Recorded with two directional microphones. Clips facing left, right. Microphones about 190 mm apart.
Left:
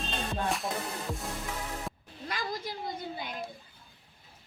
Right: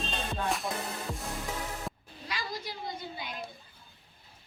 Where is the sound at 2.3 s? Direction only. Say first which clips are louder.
Left 2 dB; 50° left (ahead or behind).